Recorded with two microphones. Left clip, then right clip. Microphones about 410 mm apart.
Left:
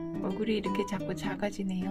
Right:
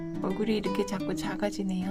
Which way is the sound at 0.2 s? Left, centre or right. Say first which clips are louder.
Right 2 dB; centre.